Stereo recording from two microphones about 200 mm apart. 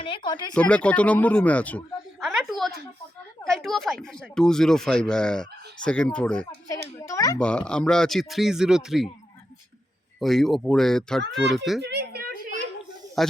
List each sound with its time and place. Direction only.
0.0 s speech: 25° left (ahead or behind)
0.5 s speech: 5° left (ahead or behind)
6.9 s speech: 15° left (ahead or behind)
7.3 s speech: 5° left (ahead or behind)
10.2 s speech: centre (ahead or behind)
11.8 s a sound: 55° right (ahead or behind)
13.2 s speech: centre (ahead or behind)